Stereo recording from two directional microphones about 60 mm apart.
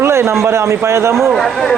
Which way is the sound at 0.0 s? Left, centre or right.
Right.